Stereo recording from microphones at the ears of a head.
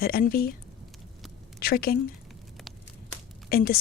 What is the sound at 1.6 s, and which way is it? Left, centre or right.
Speech, left.